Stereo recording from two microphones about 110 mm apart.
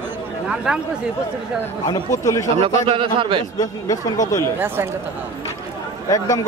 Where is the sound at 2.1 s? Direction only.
30° left (ahead or behind).